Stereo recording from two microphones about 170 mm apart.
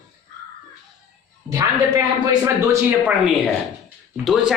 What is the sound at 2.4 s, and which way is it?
Speech, 15° right (ahead or behind).